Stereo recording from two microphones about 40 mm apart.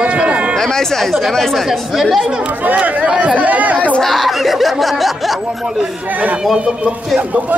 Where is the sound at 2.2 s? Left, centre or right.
Right.